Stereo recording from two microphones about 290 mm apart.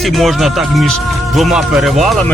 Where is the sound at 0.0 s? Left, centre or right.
Centre.